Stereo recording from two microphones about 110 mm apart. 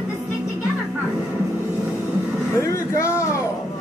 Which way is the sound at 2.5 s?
25° left (ahead or behind).